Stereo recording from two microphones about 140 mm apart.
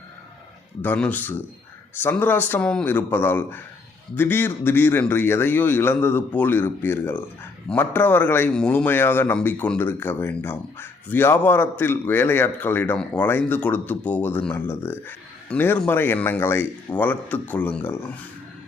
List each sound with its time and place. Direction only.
0.8 s a man's voice: 10° left (ahead or behind)